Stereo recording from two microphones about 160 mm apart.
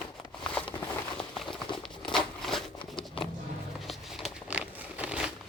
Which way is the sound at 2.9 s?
30° left (ahead or behind).